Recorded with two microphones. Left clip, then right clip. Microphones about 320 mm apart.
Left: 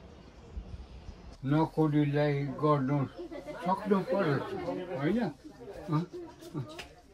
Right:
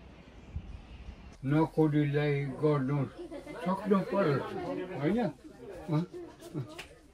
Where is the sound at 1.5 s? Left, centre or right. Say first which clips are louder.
Right 1 dB; left.